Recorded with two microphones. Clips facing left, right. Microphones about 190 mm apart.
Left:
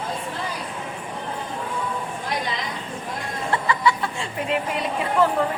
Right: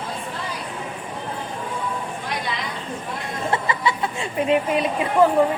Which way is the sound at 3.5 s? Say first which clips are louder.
Left 2 dB; 20° right (ahead or behind).